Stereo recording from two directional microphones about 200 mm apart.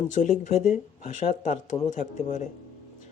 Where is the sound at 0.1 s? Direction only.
40° left (ahead or behind).